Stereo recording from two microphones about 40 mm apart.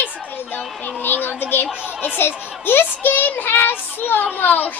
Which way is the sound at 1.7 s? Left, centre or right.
Right.